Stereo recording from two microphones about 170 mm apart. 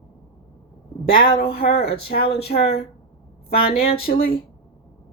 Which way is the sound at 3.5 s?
35° left (ahead or behind).